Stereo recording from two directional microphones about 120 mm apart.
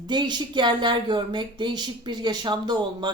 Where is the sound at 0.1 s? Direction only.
40° right (ahead or behind).